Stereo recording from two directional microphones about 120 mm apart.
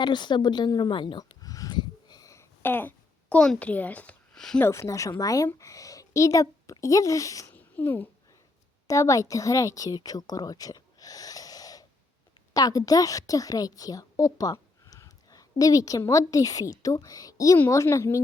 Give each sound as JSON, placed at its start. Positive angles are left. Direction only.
{"t": 0.0, "sound": "a sound", "side_deg": 40}
{"t": 4.6, "sound": "a woman's voice", "side_deg": 25}
{"t": 7.5, "sound": "babbling", "side_deg": 15}
{"t": 8.9, "sound": "a woman's voice", "side_deg": 30}